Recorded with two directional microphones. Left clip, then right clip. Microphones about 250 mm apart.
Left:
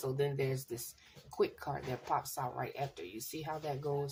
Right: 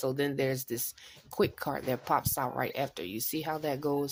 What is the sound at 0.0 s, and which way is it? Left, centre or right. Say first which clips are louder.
Speech: right 5 dB; right.